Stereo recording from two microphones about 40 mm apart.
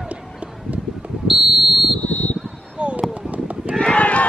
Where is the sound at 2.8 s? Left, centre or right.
Right.